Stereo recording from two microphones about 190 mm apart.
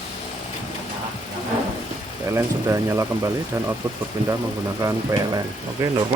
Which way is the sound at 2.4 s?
15° right (ahead or behind).